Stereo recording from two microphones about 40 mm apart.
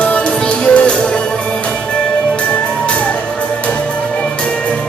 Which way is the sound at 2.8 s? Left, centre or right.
Left.